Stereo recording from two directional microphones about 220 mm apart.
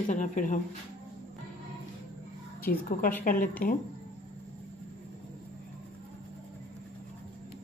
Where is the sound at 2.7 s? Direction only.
40° left (ahead or behind).